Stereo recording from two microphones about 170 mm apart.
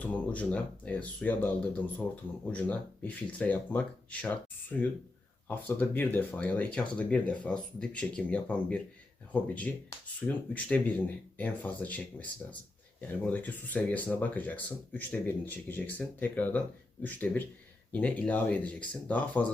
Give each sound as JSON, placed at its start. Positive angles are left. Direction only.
{"t": 0.0, "sound": "speech", "side_deg": 10}